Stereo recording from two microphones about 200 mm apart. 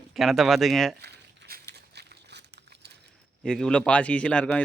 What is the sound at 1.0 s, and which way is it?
Crumpling, 50° right (ahead or behind).